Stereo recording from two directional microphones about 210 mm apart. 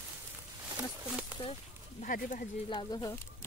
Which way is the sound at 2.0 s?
40° left (ahead or behind).